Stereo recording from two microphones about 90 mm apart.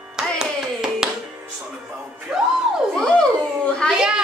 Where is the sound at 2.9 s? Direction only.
10° left (ahead or behind).